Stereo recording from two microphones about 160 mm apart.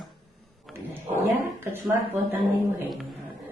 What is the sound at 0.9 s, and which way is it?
Speech, 15° right (ahead or behind).